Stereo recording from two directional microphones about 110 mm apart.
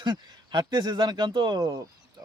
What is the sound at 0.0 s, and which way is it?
Speech, 45° right (ahead or behind).